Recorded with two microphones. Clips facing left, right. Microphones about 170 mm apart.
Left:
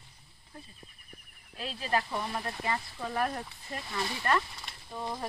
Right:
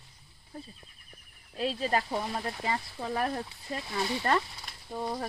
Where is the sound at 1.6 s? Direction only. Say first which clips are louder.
Right 3 dB; 25° right (ahead or behind).